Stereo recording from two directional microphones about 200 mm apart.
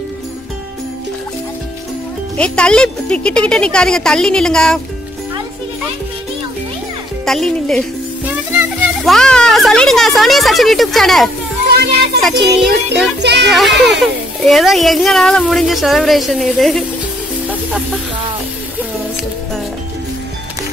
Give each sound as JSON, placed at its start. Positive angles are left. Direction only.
{"t": 2.3, "sound": "speech", "side_deg": 5}
{"t": 7.2, "sound": "a child's voice", "side_deg": 0}
{"t": 13.2, "sound": "speech", "side_deg": -55}
{"t": 13.5, "sound": "speech", "side_deg": 0}
{"t": 17.5, "sound": "music", "side_deg": -5}